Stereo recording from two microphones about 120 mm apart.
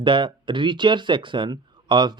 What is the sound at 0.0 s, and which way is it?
Speech, 40° right (ahead or behind).